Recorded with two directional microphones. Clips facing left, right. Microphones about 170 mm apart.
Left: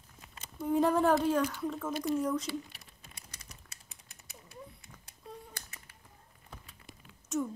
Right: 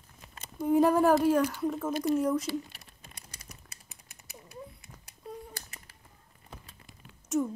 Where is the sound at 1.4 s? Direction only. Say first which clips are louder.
Right 4 dB; 25° right (ahead or behind).